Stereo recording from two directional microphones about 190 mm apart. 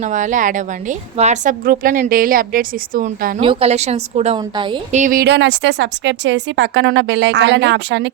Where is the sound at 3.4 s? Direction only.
30° right (ahead or behind).